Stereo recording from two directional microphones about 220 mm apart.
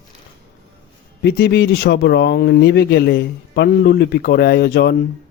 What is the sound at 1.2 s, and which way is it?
Speech, 50° left (ahead or behind).